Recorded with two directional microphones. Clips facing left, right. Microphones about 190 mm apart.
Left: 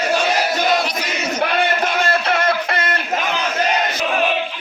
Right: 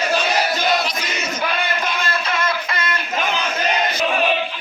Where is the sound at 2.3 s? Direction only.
65° left (ahead or behind).